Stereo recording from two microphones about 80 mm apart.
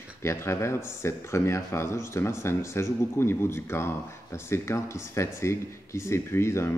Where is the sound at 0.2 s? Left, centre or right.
Left.